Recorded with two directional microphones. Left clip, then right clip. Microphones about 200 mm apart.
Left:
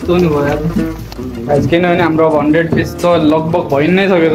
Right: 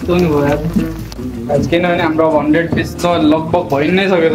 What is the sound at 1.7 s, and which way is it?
Speech, 25° left (ahead or behind).